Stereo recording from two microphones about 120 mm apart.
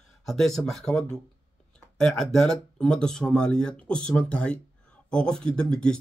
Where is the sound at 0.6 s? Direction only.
Centre (ahead or behind).